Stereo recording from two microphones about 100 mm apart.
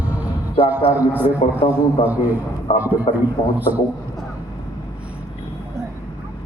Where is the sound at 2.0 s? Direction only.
90° left.